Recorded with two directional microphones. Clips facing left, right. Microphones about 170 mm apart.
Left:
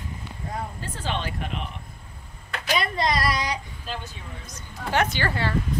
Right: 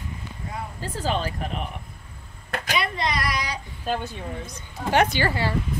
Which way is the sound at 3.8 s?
55° right (ahead or behind).